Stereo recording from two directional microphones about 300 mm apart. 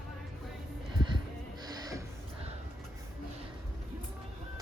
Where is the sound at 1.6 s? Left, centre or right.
Centre.